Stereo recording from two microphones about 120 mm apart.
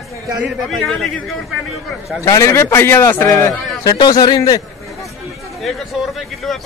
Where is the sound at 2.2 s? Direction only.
25° left (ahead or behind).